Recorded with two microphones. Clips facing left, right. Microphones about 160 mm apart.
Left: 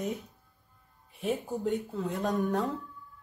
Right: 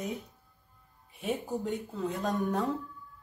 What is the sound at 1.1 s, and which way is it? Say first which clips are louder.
Speech: left 1 dB; centre (ahead or behind).